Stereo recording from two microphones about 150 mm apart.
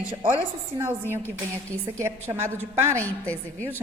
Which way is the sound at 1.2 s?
10° left (ahead or behind).